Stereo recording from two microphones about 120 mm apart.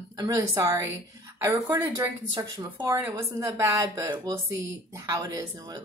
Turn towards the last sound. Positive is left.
turn(degrees=-25)  # may be behind; listen again after turning